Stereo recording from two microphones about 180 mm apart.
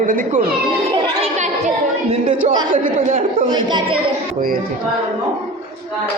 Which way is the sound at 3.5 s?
25° right (ahead or behind).